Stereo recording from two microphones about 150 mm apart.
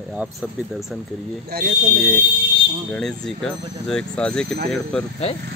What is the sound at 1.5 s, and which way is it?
Speech, 90° right.